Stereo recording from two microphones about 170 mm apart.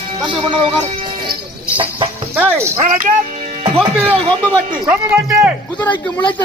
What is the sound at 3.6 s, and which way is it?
Speech, 30° right (ahead or behind).